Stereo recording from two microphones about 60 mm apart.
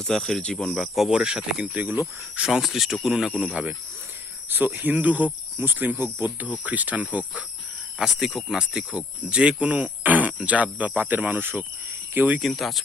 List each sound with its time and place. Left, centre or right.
0.0 s speech: centre
0.4 s speech: centre
0.7 s speech: centre; by 1.9 s right
2.5 s speech: centre
3.5 s speech: right
7.9 s speech: centre
8.5 s speech: centre; by 12.4 s right
12.4 s speech: centre